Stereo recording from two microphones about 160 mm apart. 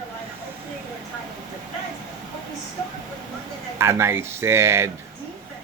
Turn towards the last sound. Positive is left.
turn(degrees=-15)  # may be behind; listen again after turning